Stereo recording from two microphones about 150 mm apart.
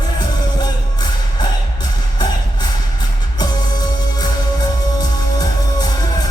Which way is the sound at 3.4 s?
25° left (ahead or behind).